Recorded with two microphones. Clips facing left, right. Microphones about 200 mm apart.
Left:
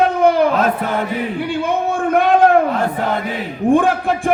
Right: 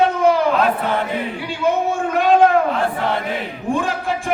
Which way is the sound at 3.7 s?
55° left (ahead or behind).